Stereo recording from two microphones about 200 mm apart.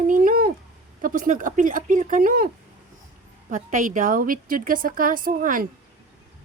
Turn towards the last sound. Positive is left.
turn(degrees=-45)  # may be behind; listen again after turning